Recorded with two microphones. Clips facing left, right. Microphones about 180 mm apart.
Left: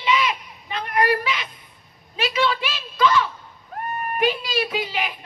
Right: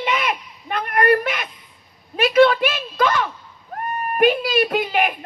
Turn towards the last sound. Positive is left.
turn(degrees=-50)  # may be behind; listen again after turning